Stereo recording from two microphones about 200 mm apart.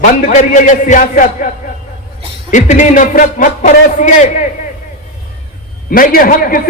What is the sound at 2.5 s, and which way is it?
A man's voice, 40° left (ahead or behind).